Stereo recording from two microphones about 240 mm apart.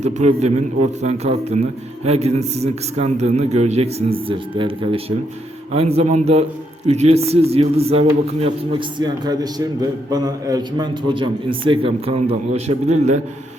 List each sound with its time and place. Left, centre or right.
0.0 s a man's voice: right